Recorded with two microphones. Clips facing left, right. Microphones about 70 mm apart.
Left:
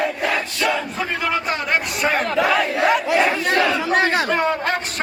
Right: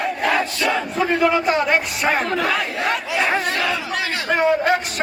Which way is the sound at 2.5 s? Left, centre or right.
Centre.